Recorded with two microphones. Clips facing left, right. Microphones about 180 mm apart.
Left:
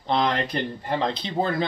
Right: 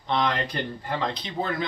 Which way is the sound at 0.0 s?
30° left (ahead or behind).